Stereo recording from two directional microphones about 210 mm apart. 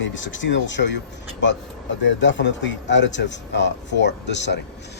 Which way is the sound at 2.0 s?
60° left (ahead or behind).